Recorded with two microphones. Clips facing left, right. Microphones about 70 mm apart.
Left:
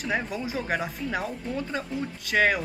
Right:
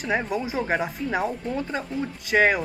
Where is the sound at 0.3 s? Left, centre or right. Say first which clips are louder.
Right 4 dB; centre.